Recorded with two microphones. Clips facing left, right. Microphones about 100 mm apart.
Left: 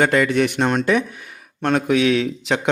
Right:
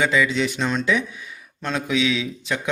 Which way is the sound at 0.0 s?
55° left (ahead or behind).